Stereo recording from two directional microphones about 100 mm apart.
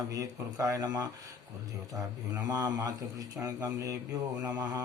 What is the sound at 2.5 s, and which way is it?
Speech, 35° right (ahead or behind).